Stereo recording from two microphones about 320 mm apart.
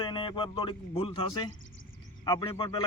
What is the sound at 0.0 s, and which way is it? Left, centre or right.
A man's voice, centre.